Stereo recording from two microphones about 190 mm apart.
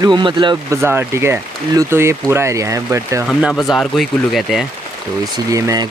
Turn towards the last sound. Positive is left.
turn(degrees=-20)  # may be behind; listen again after turning